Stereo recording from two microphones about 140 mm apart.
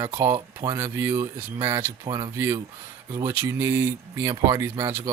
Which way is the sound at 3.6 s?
15° right (ahead or behind).